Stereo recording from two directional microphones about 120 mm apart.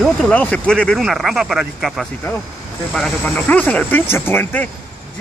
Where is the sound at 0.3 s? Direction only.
10° left (ahead or behind).